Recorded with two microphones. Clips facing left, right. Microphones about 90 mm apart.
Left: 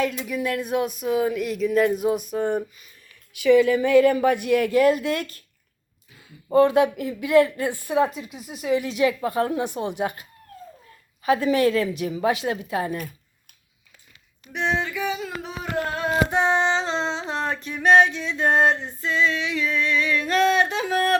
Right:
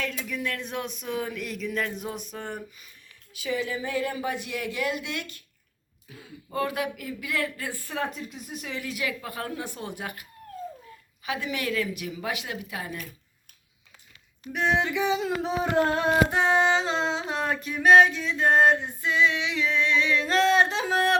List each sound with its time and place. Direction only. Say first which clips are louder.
0.0 s a sound: left 7 dB; 15° left (ahead or behind)
3.3 s speech: left 13 dB; 75° left (ahead or behind); by 5.4 s 45° left (ahead or behind)
6.5 s speech: left 12 dB; 30° left (ahead or behind)
8.1 s speech: left 2 dB; 5° left (ahead or behind)
8.7 s speech: left 12 dB; 25° left (ahead or behind)
11.2 s a woman's voice: left 12 dB; 40° left (ahead or behind)
14.5 s speech: even; centre (ahead or behind)
14.8 s a sound: right 2 dB; 20° right (ahead or behind)
16.3 s a sound: left 1 dB; centre (ahead or behind); by 21.2 s 20° right (ahead or behind)